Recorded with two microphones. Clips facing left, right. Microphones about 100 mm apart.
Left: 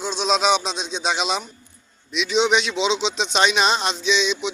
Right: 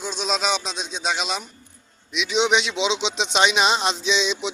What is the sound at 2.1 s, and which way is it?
Speech, 10° right (ahead or behind).